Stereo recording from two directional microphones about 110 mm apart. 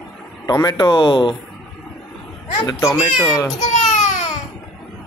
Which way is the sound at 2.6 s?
30° left (ahead or behind).